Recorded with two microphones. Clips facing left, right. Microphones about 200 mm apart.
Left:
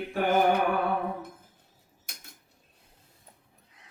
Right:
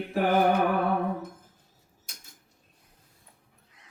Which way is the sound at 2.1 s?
60° left (ahead or behind).